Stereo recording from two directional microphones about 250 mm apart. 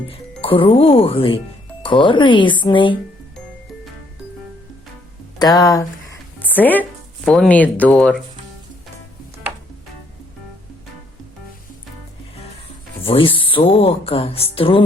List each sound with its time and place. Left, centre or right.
0.4 s speech: left
5.4 s music: centre
7.3 s speech: centre
13.0 s speech: left